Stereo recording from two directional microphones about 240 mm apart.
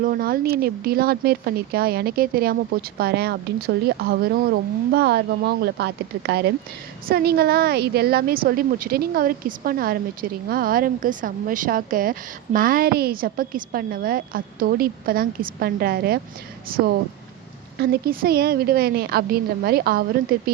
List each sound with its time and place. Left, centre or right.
0.0 s a woman's voice: right